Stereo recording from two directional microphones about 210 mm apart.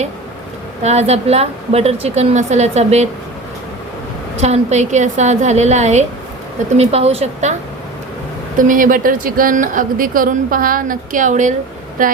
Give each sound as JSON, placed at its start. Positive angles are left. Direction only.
{"t": 0.8, "sound": "speech", "side_deg": -30}
{"t": 4.4, "sound": "a woman's voice", "side_deg": -30}
{"t": 8.5, "sound": "speech", "side_deg": -40}